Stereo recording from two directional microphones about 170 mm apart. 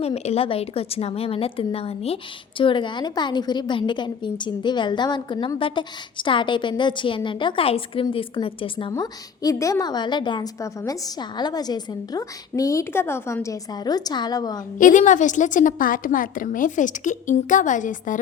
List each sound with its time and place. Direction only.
0.0 s a woman's voice: 40° left (ahead or behind)
8.9 s a woman's voice: 20° left (ahead or behind)
14.8 s a woman's voice: 50° left (ahead or behind)